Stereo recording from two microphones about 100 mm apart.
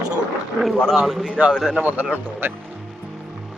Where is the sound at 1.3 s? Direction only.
10° right (ahead or behind).